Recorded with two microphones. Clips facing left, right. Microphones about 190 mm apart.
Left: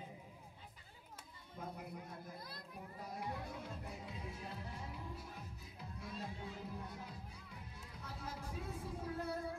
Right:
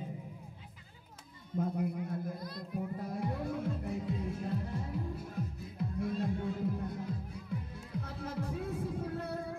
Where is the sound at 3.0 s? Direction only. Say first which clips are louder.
Right 9 dB; 55° right (ahead or behind).